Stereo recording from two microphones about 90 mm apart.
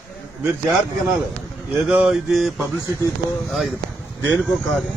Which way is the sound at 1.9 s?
15° right (ahead or behind).